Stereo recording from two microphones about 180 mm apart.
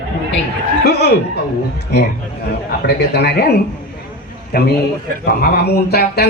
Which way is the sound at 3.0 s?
65° left (ahead or behind).